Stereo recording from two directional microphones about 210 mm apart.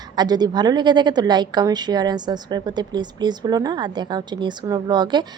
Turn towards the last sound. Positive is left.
turn(degrees=-20)  # may be behind; listen again after turning